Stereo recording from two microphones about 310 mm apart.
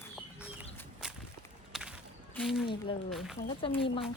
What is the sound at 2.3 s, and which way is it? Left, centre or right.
Speech, centre.